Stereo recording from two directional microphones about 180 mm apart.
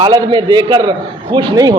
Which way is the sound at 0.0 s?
25° right (ahead or behind).